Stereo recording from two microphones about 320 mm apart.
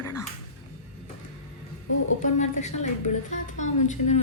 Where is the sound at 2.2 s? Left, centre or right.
Left.